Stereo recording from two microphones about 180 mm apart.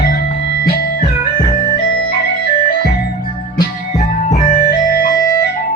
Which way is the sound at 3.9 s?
40° left (ahead or behind).